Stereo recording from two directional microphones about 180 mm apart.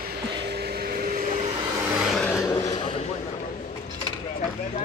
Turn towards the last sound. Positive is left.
turn(degrees=35)  # may be behind; listen again after turning